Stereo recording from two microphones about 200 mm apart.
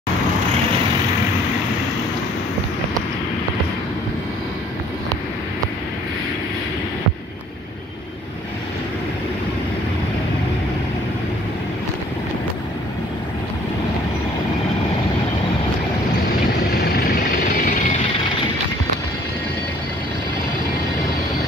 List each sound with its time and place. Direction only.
16.7 s vehicle: 50° left (ahead or behind)